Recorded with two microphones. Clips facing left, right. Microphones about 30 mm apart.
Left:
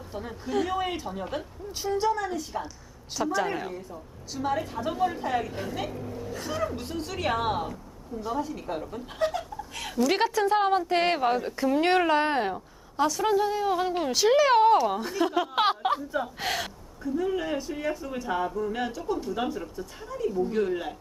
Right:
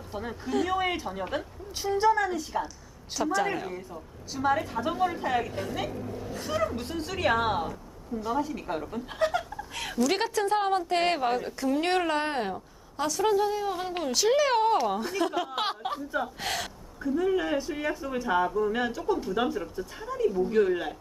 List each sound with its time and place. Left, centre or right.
0.1 s a woman's voice: centre
15.5 s speech: centre
16.1 s speech: centre
17.2 s a woman's voice: centre